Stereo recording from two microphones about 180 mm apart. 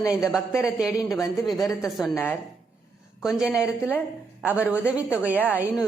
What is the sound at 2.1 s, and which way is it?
Speech, 10° left (ahead or behind).